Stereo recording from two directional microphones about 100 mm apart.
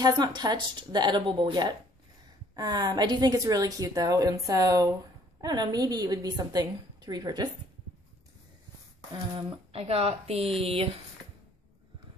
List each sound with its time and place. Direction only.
0.0 s a woman's voice: 45° right (ahead or behind)
9.7 s a woman's voice: 75° right (ahead or behind)